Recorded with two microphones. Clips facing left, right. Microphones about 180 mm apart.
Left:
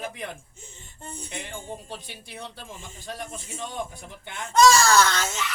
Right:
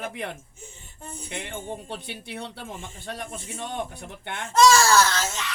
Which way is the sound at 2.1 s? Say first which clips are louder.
Right 4 dB; 65° right (ahead or behind).